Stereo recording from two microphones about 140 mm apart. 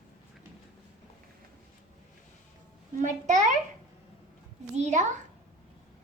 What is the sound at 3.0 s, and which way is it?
Speech, 60° right (ahead or behind).